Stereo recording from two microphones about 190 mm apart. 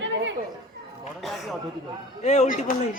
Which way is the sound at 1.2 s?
Centre (ahead or behind).